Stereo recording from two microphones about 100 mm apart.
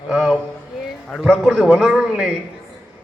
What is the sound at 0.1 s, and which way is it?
A man's voice, 5° right (ahead or behind).